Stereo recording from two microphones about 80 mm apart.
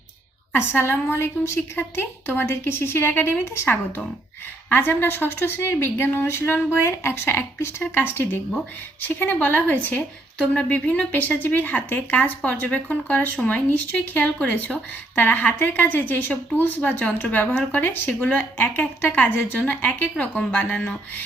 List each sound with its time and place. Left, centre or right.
0.5 s speech: left